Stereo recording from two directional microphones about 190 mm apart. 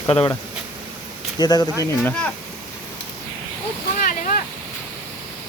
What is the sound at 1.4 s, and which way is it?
Speech, 20° left (ahead or behind).